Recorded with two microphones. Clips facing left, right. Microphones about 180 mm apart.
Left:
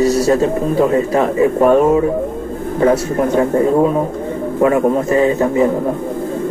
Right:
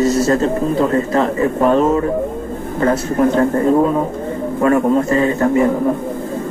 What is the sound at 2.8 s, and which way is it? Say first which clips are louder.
Speech: left 1 dB; 10° left (ahead or behind).